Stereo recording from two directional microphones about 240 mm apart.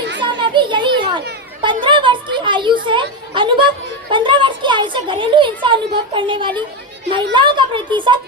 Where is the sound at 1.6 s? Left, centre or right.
Right.